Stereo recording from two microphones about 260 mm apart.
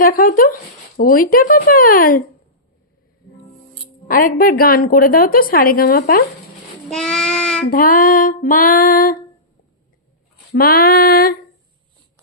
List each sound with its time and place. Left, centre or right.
0.0 s a woman's voice: left
4.1 s a woman's voice: left
6.8 s child singing: centre
7.7 s a woman's voice: left
10.5 s a woman's voice: left